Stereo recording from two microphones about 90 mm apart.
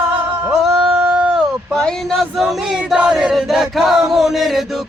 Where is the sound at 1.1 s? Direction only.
10° right (ahead or behind).